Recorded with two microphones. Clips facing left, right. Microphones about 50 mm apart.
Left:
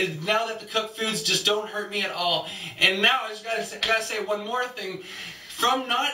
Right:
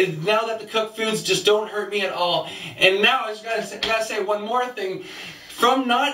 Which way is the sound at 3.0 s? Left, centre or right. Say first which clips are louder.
Right 3 dB; centre.